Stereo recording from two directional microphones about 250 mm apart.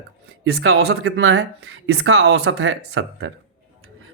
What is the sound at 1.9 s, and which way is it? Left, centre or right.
Speech, right.